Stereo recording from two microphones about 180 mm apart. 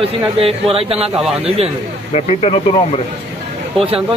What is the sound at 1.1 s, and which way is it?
Speech, centre (ahead or behind).